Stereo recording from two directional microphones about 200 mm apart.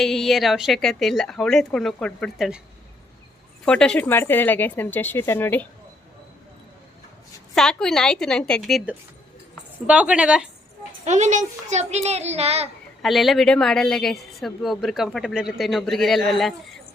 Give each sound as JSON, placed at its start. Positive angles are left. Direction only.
{"t": 0.0, "sound": "a woman's voice", "side_deg": 0}
{"t": 3.7, "sound": "speech", "side_deg": 5}
{"t": 7.5, "sound": "a woman's voice", "side_deg": 5}
{"t": 11.0, "sound": "a child's voice", "side_deg": -35}
{"t": 13.0, "sound": "a woman's voice", "side_deg": 0}